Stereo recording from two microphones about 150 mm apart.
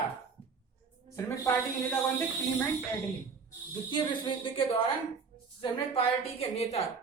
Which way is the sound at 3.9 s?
35° left (ahead or behind).